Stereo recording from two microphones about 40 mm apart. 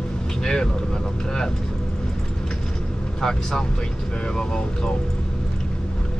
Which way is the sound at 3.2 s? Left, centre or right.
Centre.